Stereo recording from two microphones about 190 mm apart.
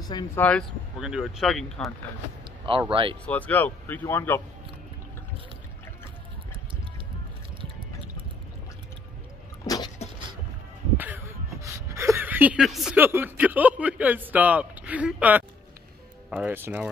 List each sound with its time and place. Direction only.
0.0 s speech: 20° left (ahead or behind)
0.4 s speech: 5° left (ahead or behind)
2.9 s speech: 25° right (ahead or behind)
3.3 s speech: 10° left (ahead or behind)
11.0 s a sound: 10° right (ahead or behind)
16.3 s speech: 10° right (ahead or behind)